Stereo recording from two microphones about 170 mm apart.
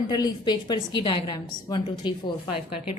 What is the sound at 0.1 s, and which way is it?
A woman's voice, 25° left (ahead or behind).